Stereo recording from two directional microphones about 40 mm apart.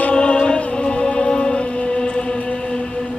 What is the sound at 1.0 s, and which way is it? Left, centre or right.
Music, left.